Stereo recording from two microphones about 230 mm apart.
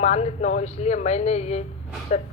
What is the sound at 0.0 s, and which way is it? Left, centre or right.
A woman's voice, left.